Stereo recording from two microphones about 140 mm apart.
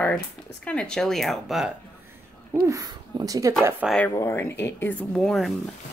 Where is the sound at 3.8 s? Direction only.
5° right (ahead or behind).